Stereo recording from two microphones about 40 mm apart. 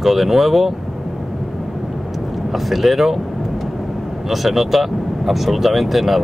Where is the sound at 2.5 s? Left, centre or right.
Centre.